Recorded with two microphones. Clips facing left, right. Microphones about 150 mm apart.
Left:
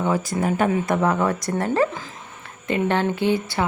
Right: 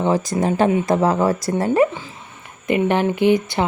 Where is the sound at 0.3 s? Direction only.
35° right (ahead or behind).